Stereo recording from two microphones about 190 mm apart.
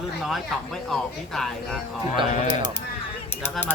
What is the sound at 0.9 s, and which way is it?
Speech, centre (ahead or behind).